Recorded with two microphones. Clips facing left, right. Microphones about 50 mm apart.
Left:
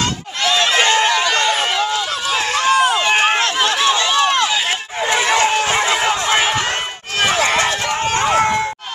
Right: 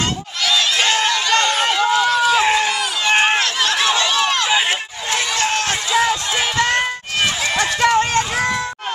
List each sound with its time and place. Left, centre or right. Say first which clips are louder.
0.4 s run: left 3 dB; left
0.8 s run: left 3 dB; centre
2.3 s run: right 3 dB; centre
2.7 s run: left 8 dB; left
3.1 s run: even; centre
3.3 s run: left 2 dB; centre
3.7 s run: left 1 dB; centre
4.1 s run: left 3 dB; centre
5.0 s a sound: left 6 dB; left
5.8 s a sound: left 1 dB; left
7.4 s run: even; left